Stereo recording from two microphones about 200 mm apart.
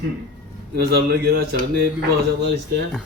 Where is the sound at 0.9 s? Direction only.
50° right (ahead or behind).